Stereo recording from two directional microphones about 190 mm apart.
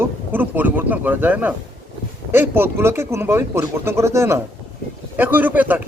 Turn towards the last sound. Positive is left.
turn(degrees=-10)  # may be behind; listen again after turning